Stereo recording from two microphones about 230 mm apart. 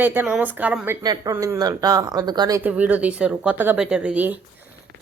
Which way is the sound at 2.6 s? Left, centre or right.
Centre.